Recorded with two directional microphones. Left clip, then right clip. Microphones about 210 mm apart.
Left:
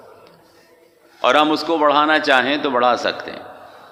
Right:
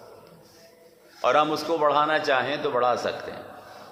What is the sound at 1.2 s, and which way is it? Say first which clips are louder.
A man's voice: left 6 dB; 45° left (ahead or behind).